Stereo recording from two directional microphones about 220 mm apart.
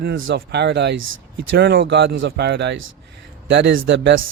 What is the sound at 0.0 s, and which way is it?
Speech, 55° right (ahead or behind).